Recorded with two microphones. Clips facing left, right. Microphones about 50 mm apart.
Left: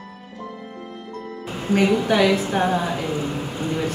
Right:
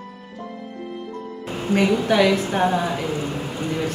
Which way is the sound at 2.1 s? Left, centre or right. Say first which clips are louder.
Even; centre.